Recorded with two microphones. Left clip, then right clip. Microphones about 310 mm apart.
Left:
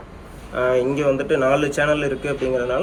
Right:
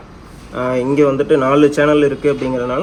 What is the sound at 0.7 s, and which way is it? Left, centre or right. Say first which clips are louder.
Speech: right 5 dB; centre.